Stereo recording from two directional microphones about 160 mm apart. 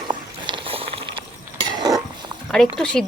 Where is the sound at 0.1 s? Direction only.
30° right (ahead or behind).